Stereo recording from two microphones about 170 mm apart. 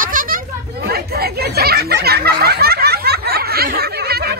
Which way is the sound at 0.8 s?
70° right (ahead or behind).